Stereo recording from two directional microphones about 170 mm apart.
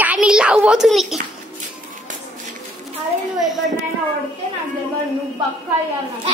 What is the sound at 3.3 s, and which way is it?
Speech, centre (ahead or behind).